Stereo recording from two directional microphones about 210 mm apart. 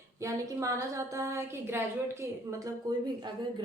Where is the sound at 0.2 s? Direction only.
15° right (ahead or behind).